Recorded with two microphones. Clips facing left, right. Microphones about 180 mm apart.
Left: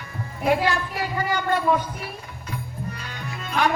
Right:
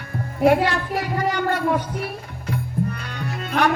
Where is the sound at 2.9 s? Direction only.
65° right (ahead or behind).